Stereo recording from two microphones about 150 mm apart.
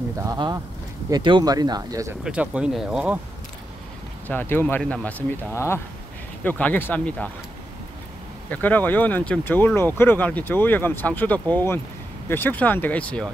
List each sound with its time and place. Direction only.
0.2 s speech: 25° right (ahead or behind)
2.2 s speech: 10° right (ahead or behind)
4.3 s speech: 15° left (ahead or behind)
8.5 s speech: 10° left (ahead or behind)